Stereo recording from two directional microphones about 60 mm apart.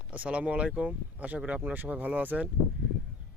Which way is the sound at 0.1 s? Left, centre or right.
Right.